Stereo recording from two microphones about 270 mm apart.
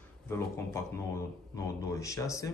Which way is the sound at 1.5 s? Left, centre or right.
Centre.